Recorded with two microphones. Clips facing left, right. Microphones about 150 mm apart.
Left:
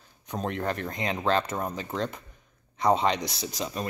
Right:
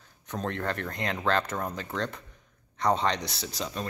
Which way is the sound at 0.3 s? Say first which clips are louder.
Left 2 dB; 15° left (ahead or behind).